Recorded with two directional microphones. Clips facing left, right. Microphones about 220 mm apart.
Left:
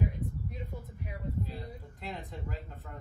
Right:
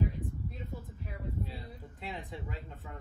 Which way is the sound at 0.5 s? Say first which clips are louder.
Left 1 dB; 15° left (ahead or behind).